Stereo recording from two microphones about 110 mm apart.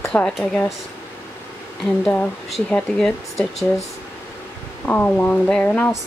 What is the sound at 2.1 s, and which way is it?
Speech, 15° left (ahead or behind).